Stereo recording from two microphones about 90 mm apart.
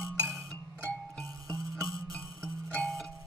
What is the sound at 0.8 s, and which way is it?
Music, 15° left (ahead or behind).